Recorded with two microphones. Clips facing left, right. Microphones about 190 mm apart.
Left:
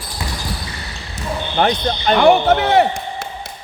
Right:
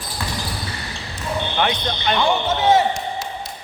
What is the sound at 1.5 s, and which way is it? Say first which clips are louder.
Speech: left 8 dB; 40° left (ahead or behind).